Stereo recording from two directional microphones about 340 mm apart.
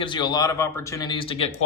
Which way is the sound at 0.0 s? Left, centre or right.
Centre.